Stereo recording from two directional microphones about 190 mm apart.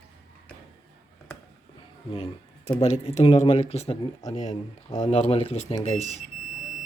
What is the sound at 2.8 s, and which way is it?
Speech, 35° left (ahead or behind).